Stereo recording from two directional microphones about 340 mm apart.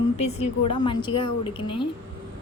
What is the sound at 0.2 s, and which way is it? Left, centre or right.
A woman's voice, centre.